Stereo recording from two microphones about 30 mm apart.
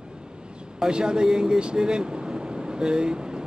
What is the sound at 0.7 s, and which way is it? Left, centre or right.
Speech, right.